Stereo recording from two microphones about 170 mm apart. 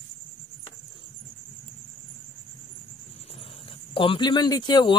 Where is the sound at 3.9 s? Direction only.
30° left (ahead or behind).